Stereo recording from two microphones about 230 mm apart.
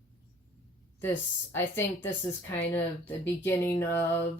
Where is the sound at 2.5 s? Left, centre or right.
Centre.